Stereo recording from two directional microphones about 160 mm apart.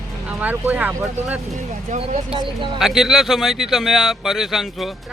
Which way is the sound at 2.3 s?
30° right (ahead or behind).